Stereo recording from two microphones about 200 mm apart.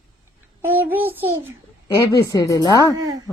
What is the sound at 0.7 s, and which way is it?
Speech, 10° right (ahead or behind).